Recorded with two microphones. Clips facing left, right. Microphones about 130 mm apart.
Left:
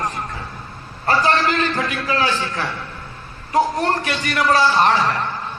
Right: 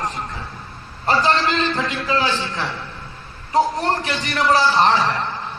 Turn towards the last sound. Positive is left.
turn(degrees=-25)  # may be behind; listen again after turning